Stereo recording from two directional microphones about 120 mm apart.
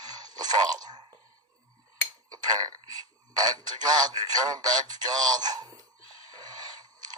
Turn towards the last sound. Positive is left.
turn(degrees=-35)  # may be behind; listen again after turning